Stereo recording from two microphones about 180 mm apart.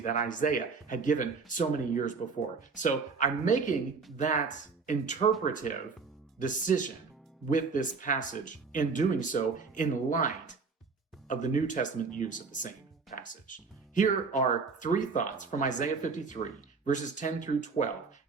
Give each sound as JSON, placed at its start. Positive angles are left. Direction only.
{"t": 0.0, "sound": "speech", "side_deg": 45}